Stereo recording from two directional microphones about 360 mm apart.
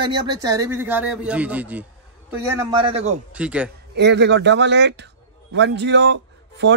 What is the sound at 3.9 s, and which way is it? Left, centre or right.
A man's voice, right.